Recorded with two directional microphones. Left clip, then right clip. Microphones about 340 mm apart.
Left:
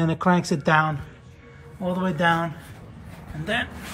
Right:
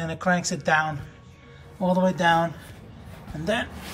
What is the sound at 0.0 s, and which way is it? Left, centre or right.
Speech, centre.